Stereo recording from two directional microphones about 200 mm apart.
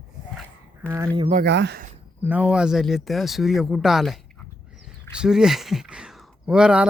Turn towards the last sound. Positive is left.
turn(degrees=-5)  # may be behind; listen again after turning